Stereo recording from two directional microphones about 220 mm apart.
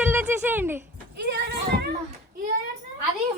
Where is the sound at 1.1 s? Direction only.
50° right (ahead or behind).